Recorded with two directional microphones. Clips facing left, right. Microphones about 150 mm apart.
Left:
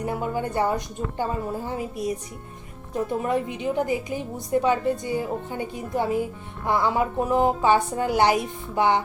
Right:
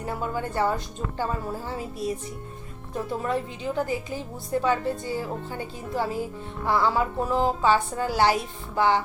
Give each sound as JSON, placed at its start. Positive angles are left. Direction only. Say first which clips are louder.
{"t": 0.0, "sound": "a woman's voice", "louder": "left 3 dB", "side_deg": 15}